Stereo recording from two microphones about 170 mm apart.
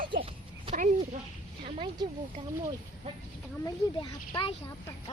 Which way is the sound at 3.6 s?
25° left (ahead or behind).